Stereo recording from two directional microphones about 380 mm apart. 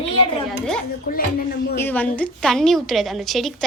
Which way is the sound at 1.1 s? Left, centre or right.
Left.